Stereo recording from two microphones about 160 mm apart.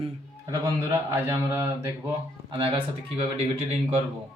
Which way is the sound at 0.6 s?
15° right (ahead or behind).